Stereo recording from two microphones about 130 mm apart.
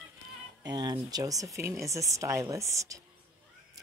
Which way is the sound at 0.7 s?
30° right (ahead or behind).